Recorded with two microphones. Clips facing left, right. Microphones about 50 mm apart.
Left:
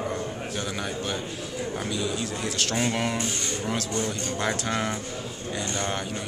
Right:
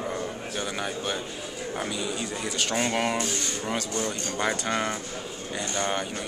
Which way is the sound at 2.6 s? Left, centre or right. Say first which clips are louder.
Right 1 dB; centre.